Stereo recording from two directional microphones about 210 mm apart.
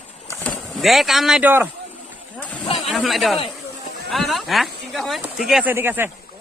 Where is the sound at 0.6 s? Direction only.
Centre (ahead or behind).